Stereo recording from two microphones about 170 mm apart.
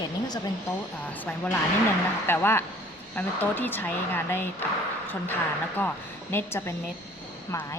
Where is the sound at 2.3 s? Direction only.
15° left (ahead or behind).